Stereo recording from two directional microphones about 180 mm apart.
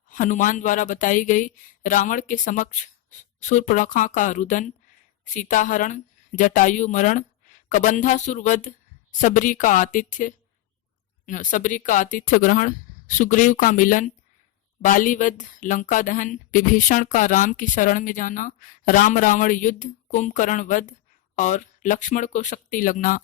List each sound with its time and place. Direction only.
0.1 s speech: 45° left (ahead or behind)